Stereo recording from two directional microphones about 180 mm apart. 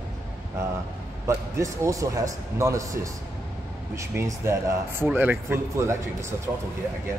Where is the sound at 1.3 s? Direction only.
15° right (ahead or behind).